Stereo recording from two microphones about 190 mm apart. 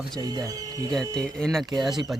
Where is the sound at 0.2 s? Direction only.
20° right (ahead or behind).